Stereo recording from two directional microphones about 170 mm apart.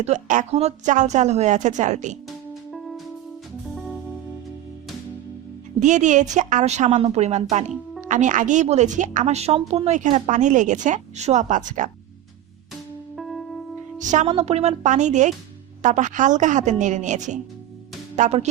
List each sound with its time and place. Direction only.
0.0 s a woman's voice: 45° right (ahead or behind)
2.6 s music: centre (ahead or behind)
5.8 s a woman's voice: 45° right (ahead or behind)
13.1 s music: centre (ahead or behind)
14.0 s a woman's voice: 45° right (ahead or behind)